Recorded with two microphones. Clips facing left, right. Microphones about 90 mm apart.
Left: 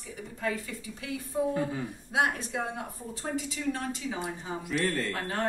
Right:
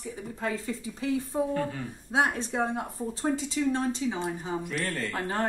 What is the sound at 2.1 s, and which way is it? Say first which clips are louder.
Speech: right 2 dB; 30° right (ahead or behind).